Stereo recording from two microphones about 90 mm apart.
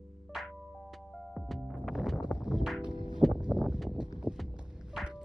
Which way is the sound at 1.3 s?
Centre (ahead or behind).